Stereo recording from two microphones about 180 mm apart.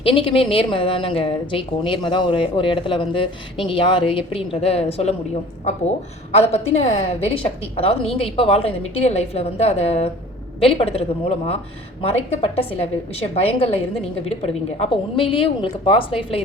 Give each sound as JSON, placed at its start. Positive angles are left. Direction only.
{"t": 0.0, "sound": "speech", "side_deg": 30}
{"t": 6.3, "sound": "speech", "side_deg": 35}